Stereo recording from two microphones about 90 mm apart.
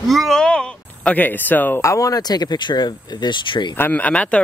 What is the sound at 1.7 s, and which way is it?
Speech, 35° left (ahead or behind).